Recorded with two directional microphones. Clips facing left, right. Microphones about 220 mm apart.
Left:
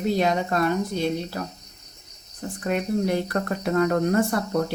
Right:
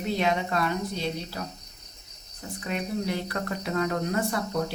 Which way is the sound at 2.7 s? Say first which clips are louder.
Left 6 dB; 50° left (ahead or behind).